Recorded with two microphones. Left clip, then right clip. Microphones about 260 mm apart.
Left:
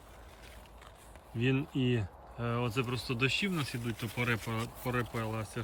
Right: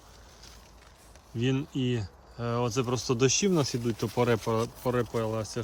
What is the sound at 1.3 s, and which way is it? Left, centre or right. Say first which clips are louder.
Speech: right 2 dB; centre.